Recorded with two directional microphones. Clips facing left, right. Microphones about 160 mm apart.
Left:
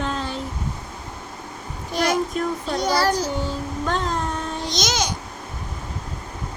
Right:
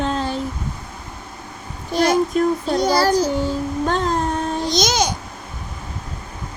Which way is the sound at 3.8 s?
35° right (ahead or behind).